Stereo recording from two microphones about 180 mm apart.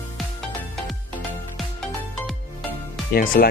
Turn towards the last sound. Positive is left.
turn(degrees=55)  # may be behind; listen again after turning